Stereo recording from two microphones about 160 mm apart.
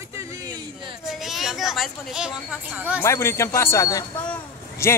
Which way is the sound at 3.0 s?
15° left (ahead or behind).